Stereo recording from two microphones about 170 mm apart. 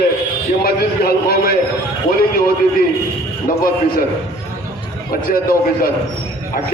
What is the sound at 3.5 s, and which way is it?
Speech, 60° left (ahead or behind).